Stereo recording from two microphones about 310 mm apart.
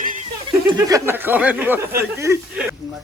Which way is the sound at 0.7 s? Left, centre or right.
Centre.